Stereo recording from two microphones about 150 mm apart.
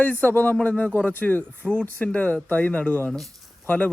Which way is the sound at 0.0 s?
10° left (ahead or behind).